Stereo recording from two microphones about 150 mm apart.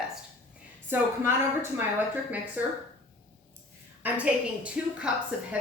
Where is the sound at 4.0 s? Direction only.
10° right (ahead or behind).